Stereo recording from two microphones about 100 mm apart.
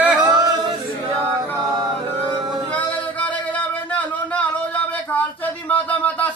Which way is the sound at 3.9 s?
15° left (ahead or behind).